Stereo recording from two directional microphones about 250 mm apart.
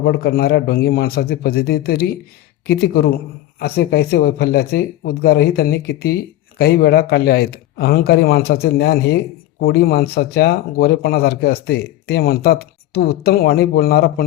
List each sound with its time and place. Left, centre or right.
0.0 s speech: left